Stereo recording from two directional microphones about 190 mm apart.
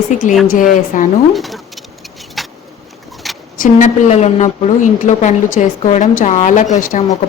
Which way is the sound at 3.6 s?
40° left (ahead or behind).